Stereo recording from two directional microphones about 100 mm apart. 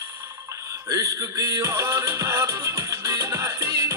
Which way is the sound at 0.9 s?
35° right (ahead or behind).